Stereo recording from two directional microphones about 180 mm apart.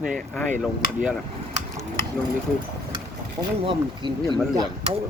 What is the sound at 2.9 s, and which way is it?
Speech, 30° right (ahead or behind).